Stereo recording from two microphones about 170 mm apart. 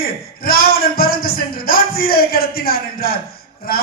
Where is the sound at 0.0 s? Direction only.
60° left (ahead or behind).